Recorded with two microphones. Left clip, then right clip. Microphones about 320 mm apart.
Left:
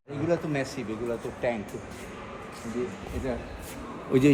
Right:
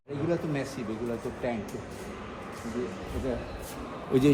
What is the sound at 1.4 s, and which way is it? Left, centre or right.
Speech, left.